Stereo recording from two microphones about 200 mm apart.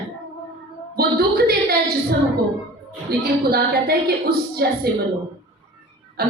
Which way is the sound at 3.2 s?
50° right (ahead or behind).